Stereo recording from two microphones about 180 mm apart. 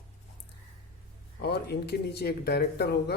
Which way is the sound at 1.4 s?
65° left (ahead or behind).